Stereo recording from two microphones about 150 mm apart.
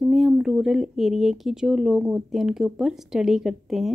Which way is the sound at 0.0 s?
Centre (ahead or behind).